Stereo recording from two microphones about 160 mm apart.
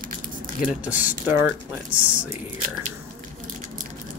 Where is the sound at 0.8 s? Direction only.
10° right (ahead or behind).